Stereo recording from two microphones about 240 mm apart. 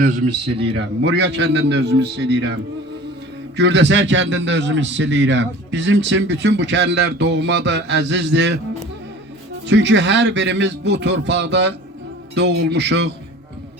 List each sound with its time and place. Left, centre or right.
0.5 s speech: right
0.8 s a man's voice: right
3.6 s a man's voice: right
9.6 s a man's voice: right